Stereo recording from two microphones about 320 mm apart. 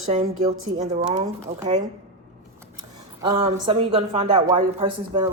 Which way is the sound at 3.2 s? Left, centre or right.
Centre.